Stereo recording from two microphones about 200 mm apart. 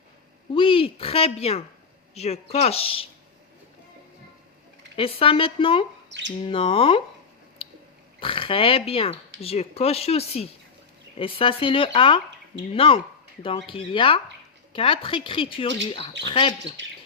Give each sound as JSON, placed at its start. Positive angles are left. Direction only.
{"t": 0.5, "sound": "speech", "side_deg": 25}
{"t": 4.9, "sound": "speech", "side_deg": 25}
{"t": 7.6, "sound": "a sound", "side_deg": 30}
{"t": 8.2, "sound": "speech", "side_deg": 25}